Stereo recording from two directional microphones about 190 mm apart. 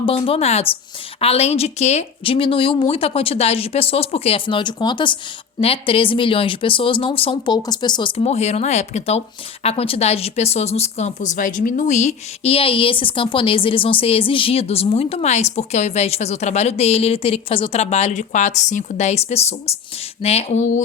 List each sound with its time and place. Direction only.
0.0 s speech: 30° left (ahead or behind)